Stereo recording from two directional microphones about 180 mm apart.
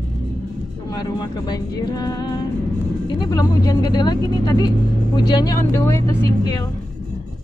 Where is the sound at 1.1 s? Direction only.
25° left (ahead or behind).